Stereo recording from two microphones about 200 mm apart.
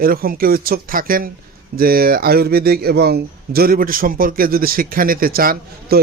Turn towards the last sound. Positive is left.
turn(degrees=-45)  # may be behind; listen again after turning